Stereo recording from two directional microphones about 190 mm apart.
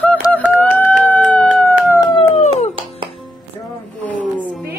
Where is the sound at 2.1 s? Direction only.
35° left (ahead or behind).